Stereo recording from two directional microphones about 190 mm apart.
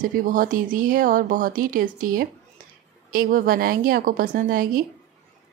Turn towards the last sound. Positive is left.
turn(degrees=-50)  # may be behind; listen again after turning